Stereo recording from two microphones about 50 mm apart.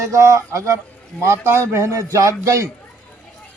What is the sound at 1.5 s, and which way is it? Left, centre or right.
A man's voice, right.